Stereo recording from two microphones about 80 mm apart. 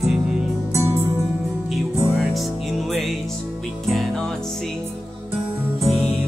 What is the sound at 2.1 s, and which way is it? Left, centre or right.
Music, centre.